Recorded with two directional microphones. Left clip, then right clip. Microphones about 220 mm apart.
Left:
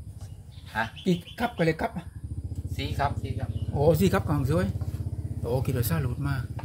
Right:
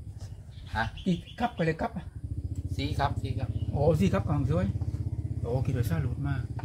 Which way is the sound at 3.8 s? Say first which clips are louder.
Left 4 dB; 30° left (ahead or behind).